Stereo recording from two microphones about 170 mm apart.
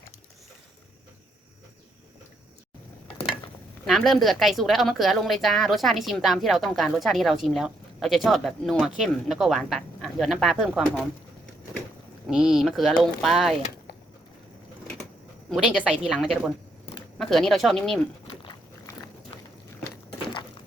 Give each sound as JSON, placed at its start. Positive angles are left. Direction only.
{"t": 3.8, "sound": "a woman's voice", "side_deg": 0}
{"t": 12.3, "sound": "a woman's voice", "side_deg": -5}
{"t": 15.4, "sound": "a woman's voice", "side_deg": -5}
{"t": 18.3, "sound": "a sound", "side_deg": 25}